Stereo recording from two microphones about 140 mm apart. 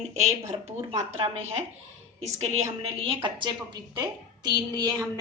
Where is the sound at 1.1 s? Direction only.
45° right (ahead or behind).